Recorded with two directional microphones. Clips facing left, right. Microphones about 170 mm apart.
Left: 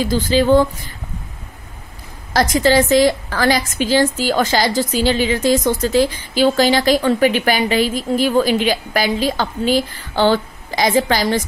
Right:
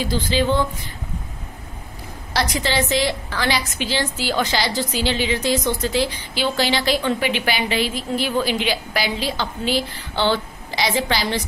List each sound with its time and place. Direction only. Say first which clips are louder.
0.0 s a woman's voice: left 5 dB; 45° left (ahead or behind)
2.3 s a woman's voice: left 8 dB; 45° left (ahead or behind)